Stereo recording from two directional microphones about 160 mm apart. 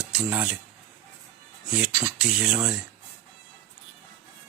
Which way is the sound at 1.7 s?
5° right (ahead or behind).